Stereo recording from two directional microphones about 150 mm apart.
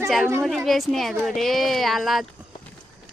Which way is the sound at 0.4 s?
Centre (ahead or behind).